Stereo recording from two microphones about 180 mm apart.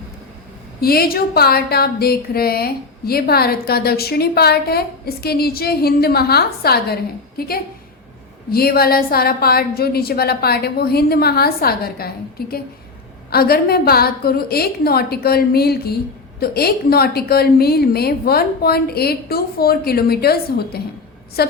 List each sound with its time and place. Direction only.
0.8 s a woman's voice: 55° left (ahead or behind)